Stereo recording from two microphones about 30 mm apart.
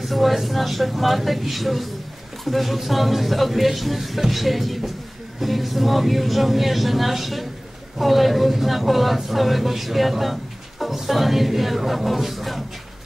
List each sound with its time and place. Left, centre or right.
0.0 s speech: centre